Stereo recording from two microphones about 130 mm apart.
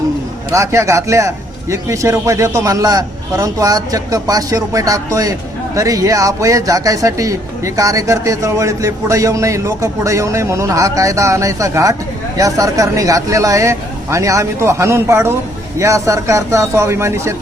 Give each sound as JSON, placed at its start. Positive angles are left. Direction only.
{"t": 0.5, "sound": "speech", "side_deg": -25}